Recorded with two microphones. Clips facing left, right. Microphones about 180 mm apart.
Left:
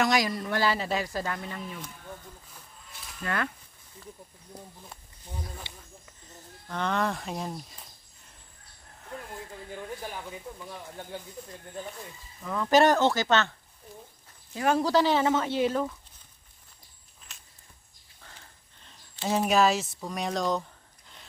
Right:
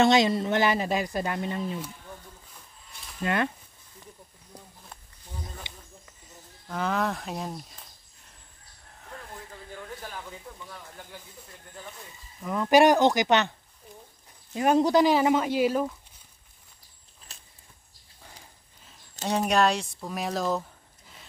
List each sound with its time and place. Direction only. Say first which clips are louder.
0.0 s speech: right 5 dB; 25° right (ahead or behind)
3.2 s speech: right 5 dB; 20° right (ahead or behind)
5.7 s snake: right 1 dB; 15° right (ahead or behind)
6.7 s speech: right 1 dB; 5° right (ahead or behind)
10.7 s speech: left 4 dB; 25° left (ahead or behind)
12.4 s speech: right 2 dB; 15° right (ahead or behind)
14.5 s speech: right 3 dB; 20° right (ahead or behind)
17.3 s a sound: right 2 dB; 35° right (ahead or behind)
18.2 s sniff: right 2 dB; 15° right (ahead or behind)
19.2 s speech: even; centre (ahead or behind)